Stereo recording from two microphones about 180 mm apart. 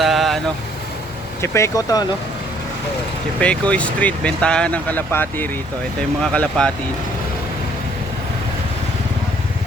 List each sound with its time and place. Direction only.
0.0 s vehicle: centre (ahead or behind)
1.4 s speech: 15° left (ahead or behind)
3.4 s speech: 5° left (ahead or behind)